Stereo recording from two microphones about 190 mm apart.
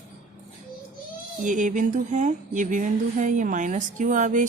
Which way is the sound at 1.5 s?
40° right (ahead or behind).